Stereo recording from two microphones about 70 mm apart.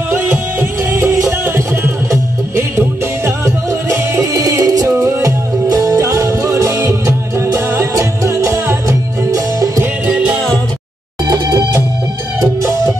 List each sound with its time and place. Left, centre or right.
0.1 s music: right
7.9 s music: right
10.0 s music: centre
11.2 s music: right